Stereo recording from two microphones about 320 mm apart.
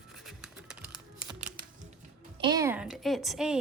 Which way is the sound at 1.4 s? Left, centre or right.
Right.